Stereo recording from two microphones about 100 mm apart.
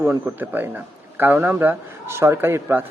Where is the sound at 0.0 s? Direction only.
20° right (ahead or behind).